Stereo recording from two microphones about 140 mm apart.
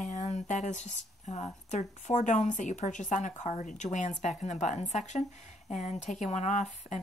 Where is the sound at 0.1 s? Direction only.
55° left (ahead or behind).